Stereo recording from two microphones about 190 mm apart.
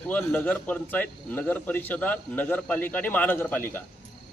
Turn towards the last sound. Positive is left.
turn(degrees=10)  # may be behind; listen again after turning